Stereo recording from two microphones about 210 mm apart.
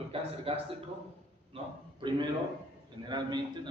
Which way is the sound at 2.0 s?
20° right (ahead or behind).